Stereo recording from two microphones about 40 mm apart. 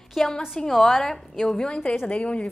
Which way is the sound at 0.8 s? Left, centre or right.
Centre.